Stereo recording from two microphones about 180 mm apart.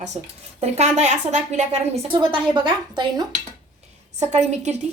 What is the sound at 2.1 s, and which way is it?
A woman's voice, 25° right (ahead or behind).